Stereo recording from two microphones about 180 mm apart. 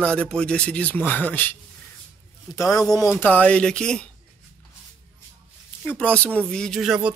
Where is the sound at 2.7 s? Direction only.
20° left (ahead or behind).